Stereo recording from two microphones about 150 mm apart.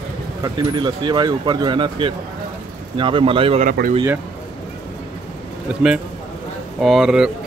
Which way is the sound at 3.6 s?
70° right (ahead or behind).